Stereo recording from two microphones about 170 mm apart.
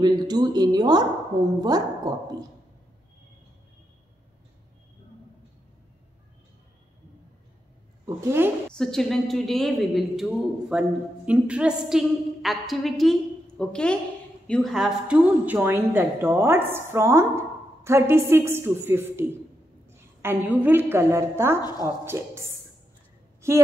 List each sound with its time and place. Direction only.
0.0 s a woman's voice: 25° right (ahead or behind)
8.0 s a woman's voice: 15° right (ahead or behind)
8.7 s a woman's voice: 5° left (ahead or behind); by 22.5 s 15° right (ahead or behind)